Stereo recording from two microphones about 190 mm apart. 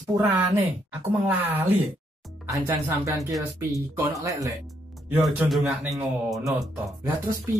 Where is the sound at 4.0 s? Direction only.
15° right (ahead or behind).